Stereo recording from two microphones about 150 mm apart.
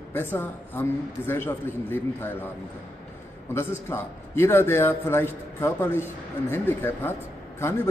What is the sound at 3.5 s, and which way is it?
A man's voice, 15° left (ahead or behind).